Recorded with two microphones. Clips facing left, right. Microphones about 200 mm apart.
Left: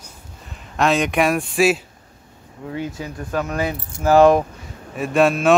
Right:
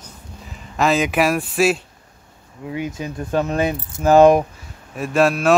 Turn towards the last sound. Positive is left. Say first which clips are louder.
# left 1 dB
turn(degrees=0)  # may be behind; listen again after turning